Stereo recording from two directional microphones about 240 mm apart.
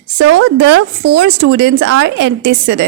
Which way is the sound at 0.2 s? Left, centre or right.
Right.